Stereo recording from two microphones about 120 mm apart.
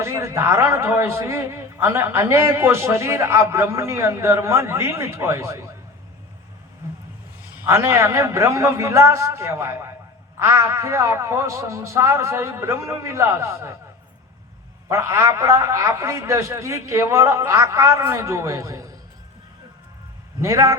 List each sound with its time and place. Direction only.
0.0 s a man's voice: 25° right (ahead or behind)
7.7 s a man's voice: 25° right (ahead or behind)
14.8 s a man's voice: 25° right (ahead or behind)
20.4 s a man's voice: 25° right (ahead or behind)